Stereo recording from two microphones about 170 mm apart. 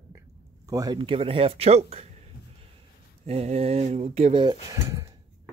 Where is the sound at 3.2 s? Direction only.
40° right (ahead or behind).